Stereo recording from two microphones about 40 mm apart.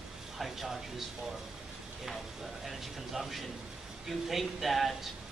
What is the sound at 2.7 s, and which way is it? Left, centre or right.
A man's voice, centre.